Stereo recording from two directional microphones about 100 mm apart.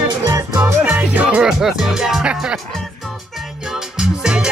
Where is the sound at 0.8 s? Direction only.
15° right (ahead or behind).